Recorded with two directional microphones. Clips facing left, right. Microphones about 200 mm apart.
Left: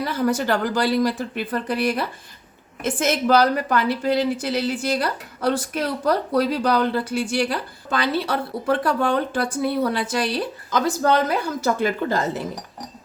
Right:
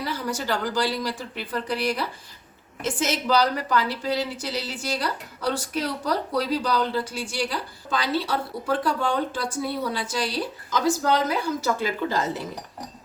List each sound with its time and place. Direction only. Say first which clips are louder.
0.0 s a woman's voice: left 7 dB; 55° left (ahead or behind)